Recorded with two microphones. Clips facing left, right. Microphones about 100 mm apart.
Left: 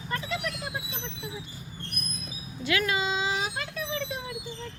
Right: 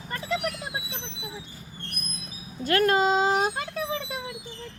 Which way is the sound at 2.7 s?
50° right (ahead or behind).